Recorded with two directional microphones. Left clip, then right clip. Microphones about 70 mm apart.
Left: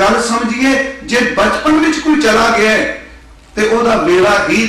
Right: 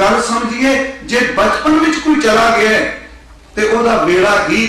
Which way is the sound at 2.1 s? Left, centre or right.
Left.